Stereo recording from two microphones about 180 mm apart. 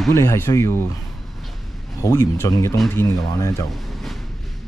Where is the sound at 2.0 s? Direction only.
20° left (ahead or behind).